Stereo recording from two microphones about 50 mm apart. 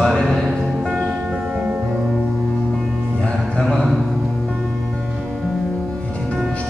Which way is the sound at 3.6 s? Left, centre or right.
Centre.